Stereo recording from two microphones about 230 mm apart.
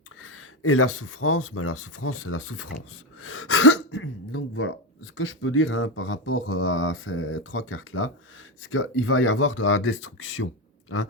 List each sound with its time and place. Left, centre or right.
0.2 s speech: left